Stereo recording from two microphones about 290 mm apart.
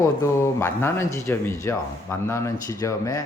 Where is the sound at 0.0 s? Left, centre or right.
Centre.